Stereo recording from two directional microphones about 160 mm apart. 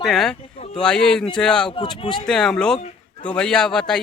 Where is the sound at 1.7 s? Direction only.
30° left (ahead or behind).